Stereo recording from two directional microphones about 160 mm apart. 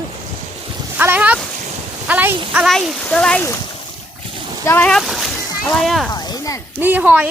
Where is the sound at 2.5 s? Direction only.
5° right (ahead or behind).